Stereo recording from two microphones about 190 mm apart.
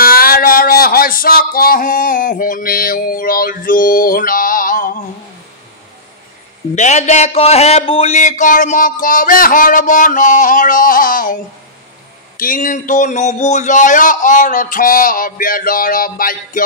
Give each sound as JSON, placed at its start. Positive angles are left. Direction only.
{"t": 0.0, "sound": "a sound", "side_deg": 50}
{"t": 6.7, "sound": "a man's voice", "side_deg": 40}
{"t": 12.4, "sound": "a man's voice", "side_deg": 45}